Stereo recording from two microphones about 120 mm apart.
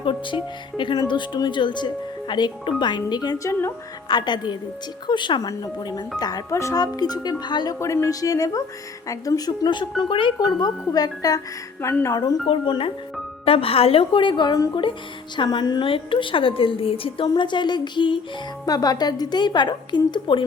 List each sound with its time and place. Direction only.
0.0 s speech: 45° left (ahead or behind); by 3.7 s 25° left (ahead or behind)
4.1 s speech: 35° left (ahead or behind)
7.8 s a woman's voice: 25° left (ahead or behind)
12.5 s a woman's voice: 45° left (ahead or behind)